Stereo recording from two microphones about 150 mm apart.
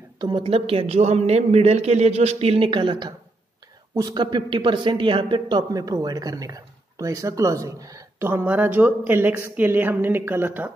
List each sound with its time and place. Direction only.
0.2 s a man's voice: 35° right (ahead or behind); by 10.7 s 15° right (ahead or behind)